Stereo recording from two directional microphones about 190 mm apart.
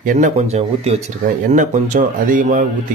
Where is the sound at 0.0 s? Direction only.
40° right (ahead or behind).